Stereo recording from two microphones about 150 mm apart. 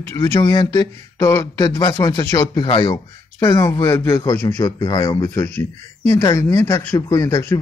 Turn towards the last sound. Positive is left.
turn(degrees=20)  # may be behind; listen again after turning